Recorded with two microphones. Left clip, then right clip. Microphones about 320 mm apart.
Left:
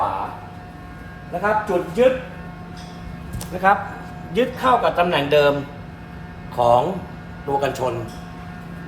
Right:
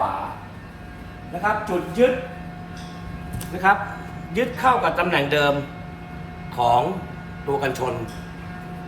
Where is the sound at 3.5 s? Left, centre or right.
Centre.